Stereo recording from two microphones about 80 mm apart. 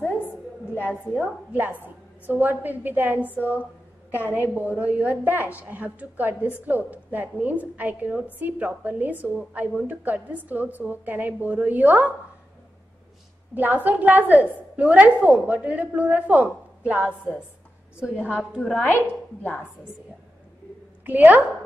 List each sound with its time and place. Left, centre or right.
0.7 s a woman's voice: left
1.5 s a woman's voice: right
13.6 s a woman's voice: right
18.1 s a woman's voice: left
21.0 s a woman's voice: right